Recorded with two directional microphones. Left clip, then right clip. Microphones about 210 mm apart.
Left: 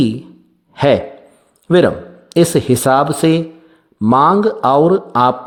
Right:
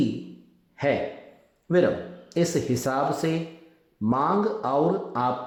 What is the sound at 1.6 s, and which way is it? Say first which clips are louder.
A man's voice: left 10 dB; 40° left (ahead or behind).